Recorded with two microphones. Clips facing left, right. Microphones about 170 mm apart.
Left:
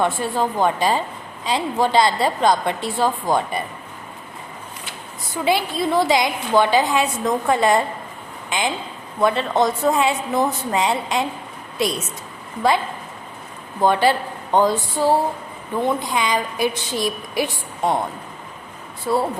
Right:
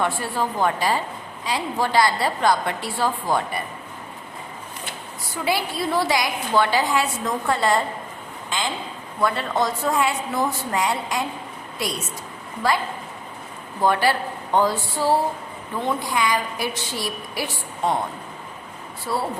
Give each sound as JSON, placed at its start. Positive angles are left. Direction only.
{"t": 0.0, "sound": "a woman's voice", "side_deg": 20}
{"t": 5.5, "sound": "a woman's voice", "side_deg": 20}
{"t": 12.6, "sound": "a woman's voice", "side_deg": 20}
{"t": 13.8, "sound": "a woman's voice", "side_deg": 20}